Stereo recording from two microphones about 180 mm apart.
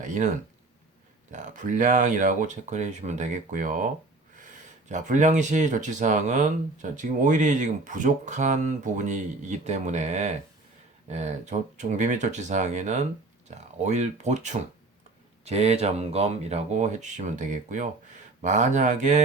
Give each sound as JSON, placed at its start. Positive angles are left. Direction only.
{"t": 0.0, "sound": "speech", "side_deg": -45}
{"t": 1.3, "sound": "speech", "side_deg": -45}
{"t": 4.9, "sound": "speech", "side_deg": -45}